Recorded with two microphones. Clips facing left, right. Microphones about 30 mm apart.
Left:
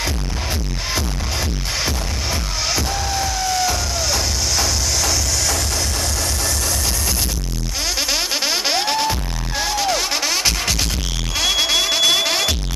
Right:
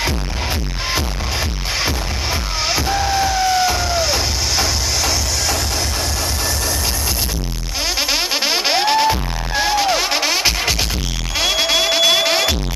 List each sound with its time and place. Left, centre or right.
2.7 s music: centre
8.1 s music: centre